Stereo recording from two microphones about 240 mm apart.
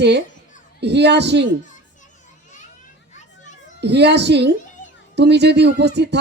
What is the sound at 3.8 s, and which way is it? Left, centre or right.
Speech, right.